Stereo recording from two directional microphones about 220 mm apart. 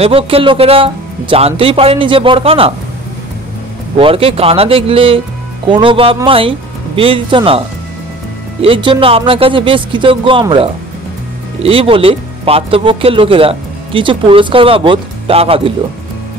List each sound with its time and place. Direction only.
0.0 s speech: 25° right (ahead or behind)
4.0 s speech: 25° right (ahead or behind)
8.6 s speech: 25° right (ahead or behind)